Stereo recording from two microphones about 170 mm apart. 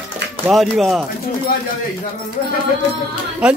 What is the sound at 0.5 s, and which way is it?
Speech, centre (ahead or behind).